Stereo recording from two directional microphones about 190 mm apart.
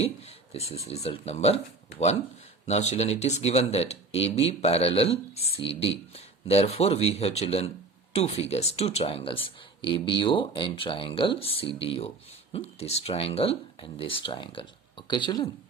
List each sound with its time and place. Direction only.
0.0 s speech: 35° left (ahead or behind)
2.6 s speech: 35° left (ahead or behind)